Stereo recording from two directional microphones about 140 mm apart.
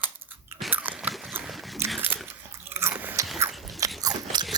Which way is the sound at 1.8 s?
15° right (ahead or behind).